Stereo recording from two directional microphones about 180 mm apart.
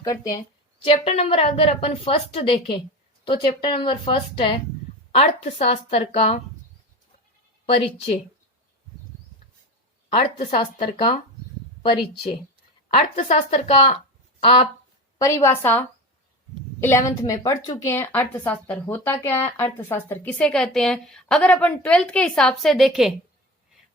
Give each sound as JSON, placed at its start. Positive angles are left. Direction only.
{"t": 0.0, "sound": "speech", "side_deg": 20}
{"t": 0.9, "sound": "a woman's voice", "side_deg": 35}
{"t": 10.3, "sound": "a woman's voice", "side_deg": 50}
{"t": 10.6, "sound": "speech", "side_deg": 30}
{"t": 12.9, "sound": "a woman's voice", "side_deg": 35}
{"t": 15.2, "sound": "a woman's voice", "side_deg": 15}